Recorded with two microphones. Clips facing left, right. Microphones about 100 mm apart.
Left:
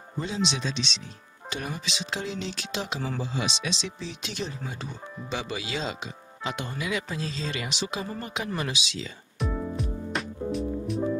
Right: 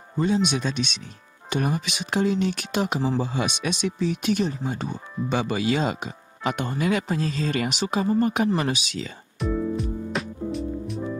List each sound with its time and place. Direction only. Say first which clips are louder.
0.2 s speech: right 7 dB; 50° right (ahead or behind)
9.4 s music: right 5 dB; centre (ahead or behind)